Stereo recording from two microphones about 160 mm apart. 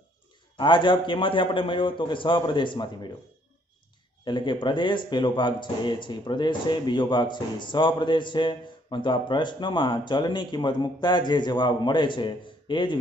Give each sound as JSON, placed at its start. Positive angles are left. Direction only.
{"t": 0.6, "sound": "a man's voice", "side_deg": 30}
{"t": 4.2, "sound": "speech", "side_deg": 30}